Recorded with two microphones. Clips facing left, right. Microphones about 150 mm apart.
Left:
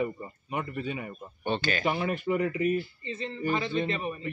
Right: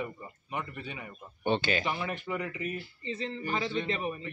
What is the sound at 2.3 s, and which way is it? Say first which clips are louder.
Speech: left 8 dB; 30° left (ahead or behind).